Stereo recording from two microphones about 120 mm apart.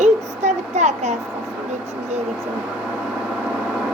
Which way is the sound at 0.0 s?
70° right (ahead or behind).